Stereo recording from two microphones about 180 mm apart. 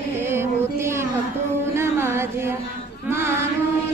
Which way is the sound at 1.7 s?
15° right (ahead or behind).